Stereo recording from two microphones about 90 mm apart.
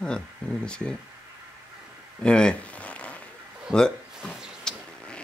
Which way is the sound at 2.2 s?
10° left (ahead or behind).